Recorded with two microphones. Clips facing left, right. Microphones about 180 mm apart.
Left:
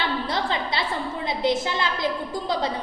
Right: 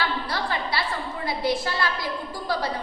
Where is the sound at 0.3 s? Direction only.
20° left (ahead or behind).